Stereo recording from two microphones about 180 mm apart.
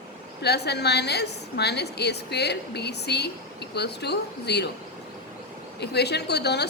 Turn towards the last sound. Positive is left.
turn(degrees=65)  # may be behind; listen again after turning